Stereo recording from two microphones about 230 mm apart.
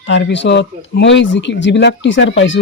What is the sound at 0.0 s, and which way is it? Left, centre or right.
Speech, left.